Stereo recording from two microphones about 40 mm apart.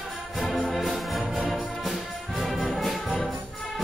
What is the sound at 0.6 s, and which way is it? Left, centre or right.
Music, centre.